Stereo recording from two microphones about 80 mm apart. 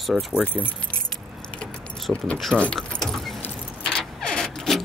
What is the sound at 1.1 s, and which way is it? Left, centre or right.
Keys jangling, centre.